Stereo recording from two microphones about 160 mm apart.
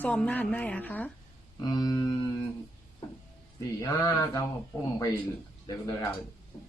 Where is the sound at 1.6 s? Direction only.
25° left (ahead or behind).